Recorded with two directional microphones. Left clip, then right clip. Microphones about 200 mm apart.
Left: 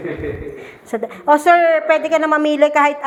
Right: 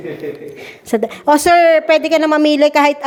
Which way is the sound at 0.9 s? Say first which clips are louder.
Right 2 dB; 65° right (ahead or behind).